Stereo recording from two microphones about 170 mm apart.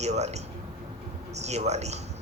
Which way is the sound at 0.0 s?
40° right (ahead or behind).